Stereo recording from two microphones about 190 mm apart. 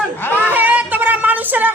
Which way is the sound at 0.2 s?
10° left (ahead or behind).